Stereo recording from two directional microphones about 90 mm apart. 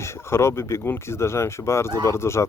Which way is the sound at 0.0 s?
30° left (ahead or behind).